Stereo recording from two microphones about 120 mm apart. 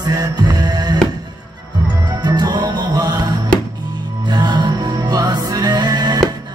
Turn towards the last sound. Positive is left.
turn(degrees=-35)  # may be behind; listen again after turning